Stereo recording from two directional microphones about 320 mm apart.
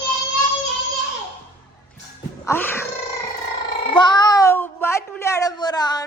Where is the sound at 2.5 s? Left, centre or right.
Centre.